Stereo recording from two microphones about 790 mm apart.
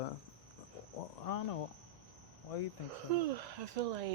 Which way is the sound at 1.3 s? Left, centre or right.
Left.